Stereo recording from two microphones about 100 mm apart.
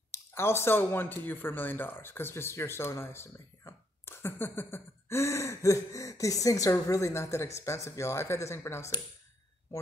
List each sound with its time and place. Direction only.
0.1 s speech: 25° left (ahead or behind)